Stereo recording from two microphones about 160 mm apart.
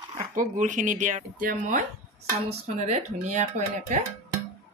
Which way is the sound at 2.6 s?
45° right (ahead or behind).